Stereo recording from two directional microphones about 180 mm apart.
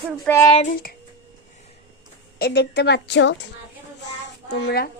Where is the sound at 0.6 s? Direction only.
55° left (ahead or behind).